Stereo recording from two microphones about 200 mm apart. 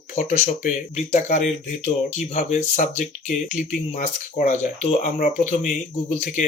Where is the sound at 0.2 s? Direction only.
35° left (ahead or behind).